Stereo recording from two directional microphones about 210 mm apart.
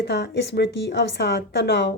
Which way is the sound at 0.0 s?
50° left (ahead or behind).